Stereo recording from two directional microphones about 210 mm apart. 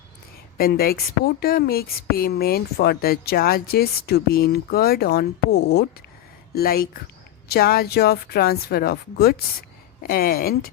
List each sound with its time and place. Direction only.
0.5 s a woman's voice: 45° left (ahead or behind)